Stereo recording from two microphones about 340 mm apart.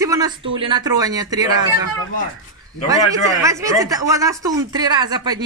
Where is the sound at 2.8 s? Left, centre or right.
Centre.